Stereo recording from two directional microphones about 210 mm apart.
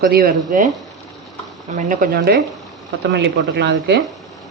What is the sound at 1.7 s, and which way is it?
Speech, 35° right (ahead or behind).